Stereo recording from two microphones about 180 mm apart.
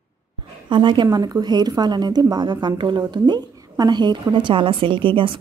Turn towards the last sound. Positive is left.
turn(degrees=-30)  # may be behind; listen again after turning